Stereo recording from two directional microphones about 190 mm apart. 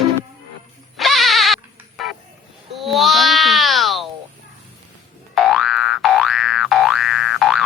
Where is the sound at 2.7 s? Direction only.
Centre (ahead or behind).